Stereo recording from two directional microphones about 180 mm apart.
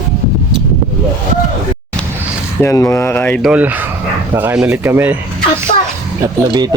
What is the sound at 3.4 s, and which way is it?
Speech, 5° right (ahead or behind).